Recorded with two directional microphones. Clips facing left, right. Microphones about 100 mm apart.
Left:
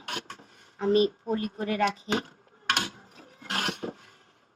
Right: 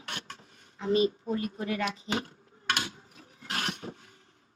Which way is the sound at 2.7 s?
50° left (ahead or behind).